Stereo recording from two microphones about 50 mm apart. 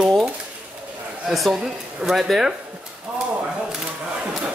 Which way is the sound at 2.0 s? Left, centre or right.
Centre.